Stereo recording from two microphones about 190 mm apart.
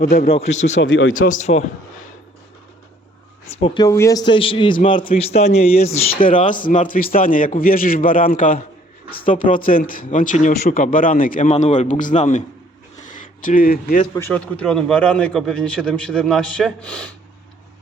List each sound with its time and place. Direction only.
0.0 s speech: 50° left (ahead or behind)
0.3 s a man's voice: 30° left (ahead or behind)
0.8 s speech: 85° left
1.1 s a man's voice: 45° left (ahead or behind)
3.6 s a man's voice: 20° left (ahead or behind)
6.1 s speech: 45° left (ahead or behind)
13.4 s speech: 45° left (ahead or behind)
14.3 s a man's voice: 5° left (ahead or behind)